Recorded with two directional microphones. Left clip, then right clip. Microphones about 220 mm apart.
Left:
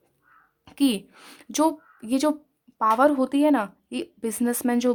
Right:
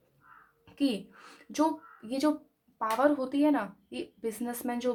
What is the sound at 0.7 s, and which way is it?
A woman's voice, 35° left (ahead or behind).